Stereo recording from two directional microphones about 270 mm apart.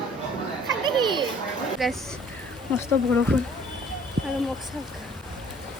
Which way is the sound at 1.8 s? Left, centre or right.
Centre.